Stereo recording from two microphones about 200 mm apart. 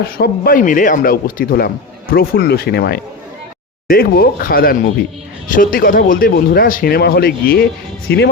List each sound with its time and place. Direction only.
0.0 s speech: 50° left (ahead or behind)